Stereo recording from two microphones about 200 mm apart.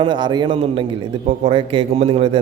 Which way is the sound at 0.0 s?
25° right (ahead or behind).